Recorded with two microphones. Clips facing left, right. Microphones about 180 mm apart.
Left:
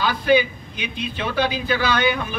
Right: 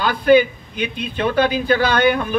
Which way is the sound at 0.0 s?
50° right (ahead or behind).